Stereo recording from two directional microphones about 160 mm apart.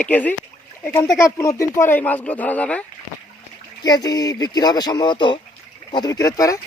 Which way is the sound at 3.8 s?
25° left (ahead or behind).